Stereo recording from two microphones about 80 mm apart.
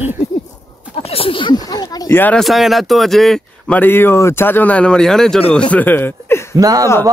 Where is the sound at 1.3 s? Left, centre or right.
Left.